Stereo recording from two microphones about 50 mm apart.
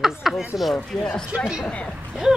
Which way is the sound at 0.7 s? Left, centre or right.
Centre.